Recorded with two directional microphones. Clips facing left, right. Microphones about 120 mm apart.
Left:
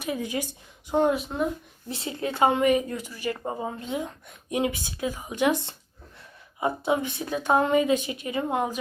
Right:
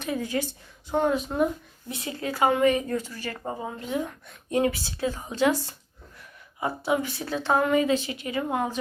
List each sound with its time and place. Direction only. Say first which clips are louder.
0.0 s a woman's voice: right 1 dB; 15° left (ahead or behind)
1.9 s a woman's voice: left 1 dB; 25° left (ahead or behind)